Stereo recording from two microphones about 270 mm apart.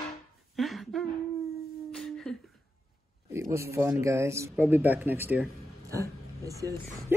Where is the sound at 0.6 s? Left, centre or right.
Centre.